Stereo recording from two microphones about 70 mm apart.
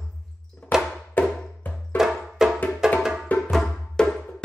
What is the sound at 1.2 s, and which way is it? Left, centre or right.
Music, left.